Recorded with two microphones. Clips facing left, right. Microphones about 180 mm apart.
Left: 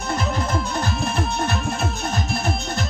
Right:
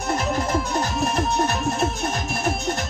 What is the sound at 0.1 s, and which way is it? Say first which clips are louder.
Music: right 1 dB; 45° right (ahead or behind).